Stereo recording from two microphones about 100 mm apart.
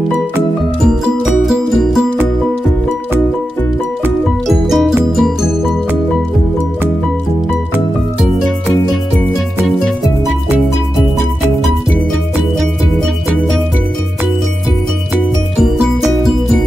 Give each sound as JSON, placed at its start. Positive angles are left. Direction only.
{"t": 0.8, "sound": "music", "side_deg": 0}
{"t": 4.5, "sound": "music", "side_deg": 0}